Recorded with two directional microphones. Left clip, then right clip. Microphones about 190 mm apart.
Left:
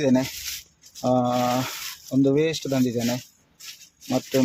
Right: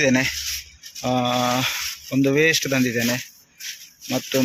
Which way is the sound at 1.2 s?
5° right (ahead or behind).